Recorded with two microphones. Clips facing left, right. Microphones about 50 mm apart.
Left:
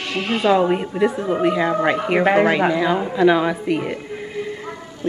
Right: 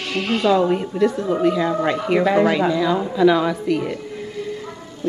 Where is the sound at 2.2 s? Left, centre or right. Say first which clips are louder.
Left 2 dB; left.